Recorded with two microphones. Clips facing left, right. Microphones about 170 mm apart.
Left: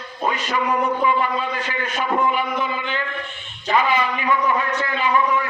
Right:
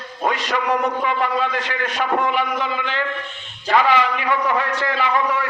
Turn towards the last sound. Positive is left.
turn(degrees=-75)  # may be behind; listen again after turning